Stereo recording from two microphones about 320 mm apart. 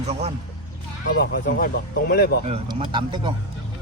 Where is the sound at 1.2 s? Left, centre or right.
Left.